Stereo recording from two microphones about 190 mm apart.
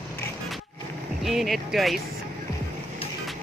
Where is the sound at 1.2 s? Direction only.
Centre (ahead or behind).